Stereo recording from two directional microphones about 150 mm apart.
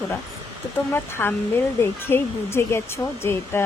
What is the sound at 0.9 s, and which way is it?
Speech, 15° left (ahead or behind).